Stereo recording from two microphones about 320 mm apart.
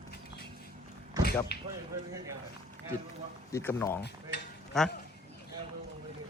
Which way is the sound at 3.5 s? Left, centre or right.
Centre.